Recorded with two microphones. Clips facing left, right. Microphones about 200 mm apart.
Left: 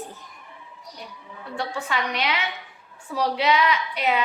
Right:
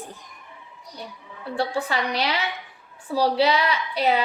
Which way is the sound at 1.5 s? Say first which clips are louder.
Right 3 dB; 35° right (ahead or behind).